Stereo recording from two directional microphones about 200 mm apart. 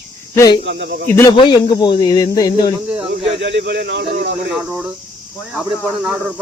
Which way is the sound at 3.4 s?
60° right (ahead or behind).